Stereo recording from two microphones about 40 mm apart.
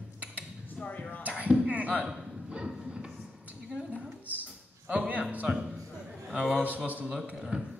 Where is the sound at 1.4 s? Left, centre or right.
Right.